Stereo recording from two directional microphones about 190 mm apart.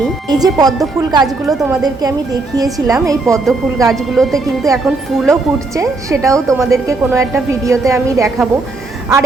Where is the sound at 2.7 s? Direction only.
20° right (ahead or behind).